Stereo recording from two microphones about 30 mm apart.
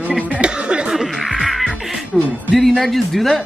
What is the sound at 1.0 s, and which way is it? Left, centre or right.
Music, centre.